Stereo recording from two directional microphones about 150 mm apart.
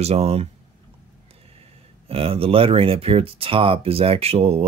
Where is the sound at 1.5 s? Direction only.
40° right (ahead or behind).